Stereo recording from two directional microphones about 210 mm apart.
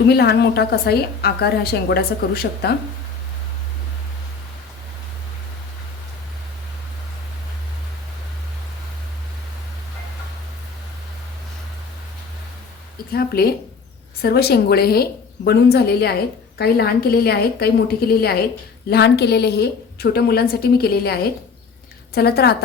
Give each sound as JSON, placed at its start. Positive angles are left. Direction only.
{"t": 0.1, "sound": "a woman's voice", "side_deg": 50}
{"t": 13.1, "sound": "a woman's voice", "side_deg": 45}